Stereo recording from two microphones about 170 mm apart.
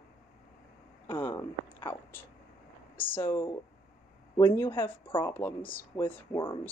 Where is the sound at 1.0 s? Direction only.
10° left (ahead or behind).